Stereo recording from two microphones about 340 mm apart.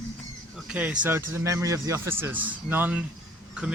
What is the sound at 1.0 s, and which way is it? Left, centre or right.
A man's voice, centre.